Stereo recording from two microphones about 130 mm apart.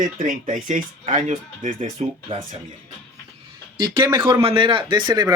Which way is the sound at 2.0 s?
55° right (ahead or behind).